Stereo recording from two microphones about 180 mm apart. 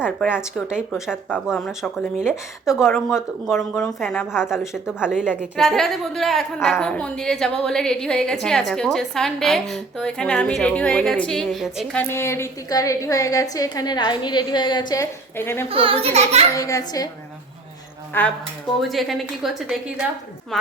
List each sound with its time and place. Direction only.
0.0 s speech: 10° left (ahead or behind)
0.9 s a woman's voice: 5° right (ahead or behind); by 15.0 s 25° left (ahead or behind)
15.4 s speech: 15° left (ahead or behind)
15.7 s a child's voice: 30° right (ahead or behind)
16.6 s a child's voice: 20° left (ahead or behind)
18.1 s speech: 10° left (ahead or behind)
18.8 s a woman's voice: centre (ahead or behind)